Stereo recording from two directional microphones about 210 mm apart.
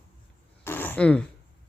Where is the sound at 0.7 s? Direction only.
10° left (ahead or behind).